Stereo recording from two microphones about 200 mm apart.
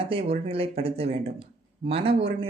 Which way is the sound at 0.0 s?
30° right (ahead or behind).